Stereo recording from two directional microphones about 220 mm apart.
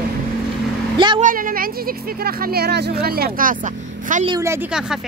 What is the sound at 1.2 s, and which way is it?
Speech, 40° right (ahead or behind).